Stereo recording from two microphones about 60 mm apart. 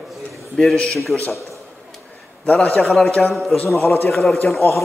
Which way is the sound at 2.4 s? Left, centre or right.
Left.